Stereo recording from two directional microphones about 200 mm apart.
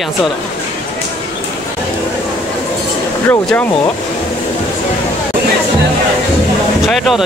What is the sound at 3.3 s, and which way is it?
Speech, 10° left (ahead or behind).